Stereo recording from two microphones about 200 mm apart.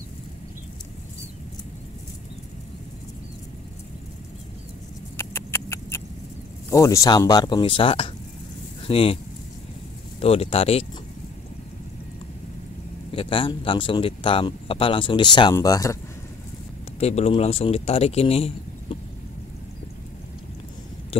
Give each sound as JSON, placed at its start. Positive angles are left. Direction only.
{"t": 5.1, "sound": "rodents", "side_deg": 10}
{"t": 6.7, "sound": "speech", "side_deg": 15}
{"t": 10.2, "sound": "speech", "side_deg": 30}
{"t": 13.1, "sound": "speech", "side_deg": 25}
{"t": 17.0, "sound": "a man's voice", "side_deg": 30}
{"t": 21.1, "sound": "a sound", "side_deg": 30}